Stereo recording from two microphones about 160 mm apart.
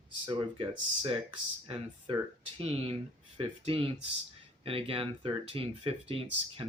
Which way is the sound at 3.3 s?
35° right (ahead or behind).